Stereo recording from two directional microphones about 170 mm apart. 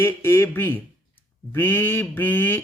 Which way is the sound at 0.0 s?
15° left (ahead or behind).